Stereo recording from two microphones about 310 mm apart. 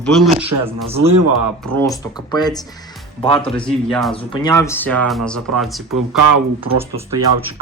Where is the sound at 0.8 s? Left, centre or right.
Centre.